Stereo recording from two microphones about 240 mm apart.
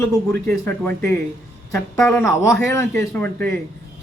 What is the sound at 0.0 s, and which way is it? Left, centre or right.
A man's voice, centre.